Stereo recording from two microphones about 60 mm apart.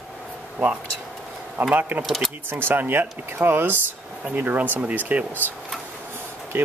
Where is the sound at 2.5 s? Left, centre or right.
Right.